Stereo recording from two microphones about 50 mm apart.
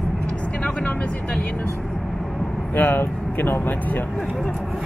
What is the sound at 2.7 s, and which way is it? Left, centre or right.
Speech, left.